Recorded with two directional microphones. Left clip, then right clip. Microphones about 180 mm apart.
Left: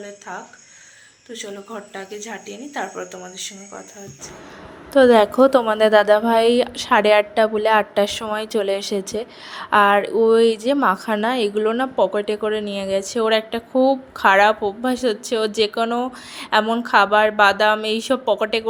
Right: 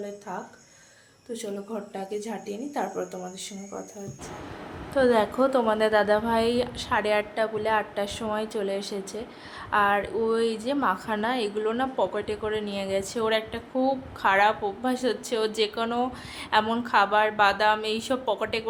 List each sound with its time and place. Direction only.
1.3 s speech: 5° right (ahead or behind)
4.9 s speech: 40° left (ahead or behind)